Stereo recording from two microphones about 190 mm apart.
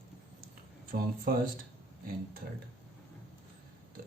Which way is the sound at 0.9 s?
50° right (ahead or behind).